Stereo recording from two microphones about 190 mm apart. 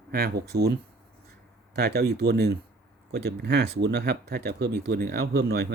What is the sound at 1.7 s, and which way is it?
Speech, 60° right (ahead or behind).